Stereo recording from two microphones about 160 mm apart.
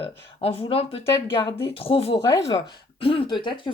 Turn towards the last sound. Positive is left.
turn(degrees=30)  # may be behind; listen again after turning